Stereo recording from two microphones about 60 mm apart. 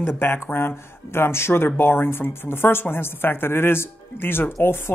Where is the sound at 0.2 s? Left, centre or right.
Left.